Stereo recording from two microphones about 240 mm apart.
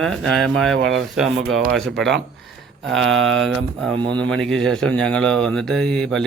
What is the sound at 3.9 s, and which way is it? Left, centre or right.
Speech, centre.